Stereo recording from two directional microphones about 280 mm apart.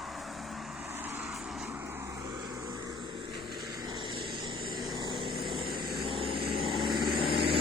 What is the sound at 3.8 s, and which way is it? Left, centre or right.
Vehicle, centre.